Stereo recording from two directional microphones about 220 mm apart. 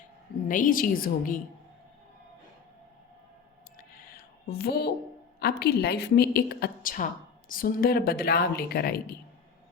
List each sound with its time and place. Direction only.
0.4 s a woman's voice: 35° left (ahead or behind)
4.4 s a woman's voice: 45° left (ahead or behind)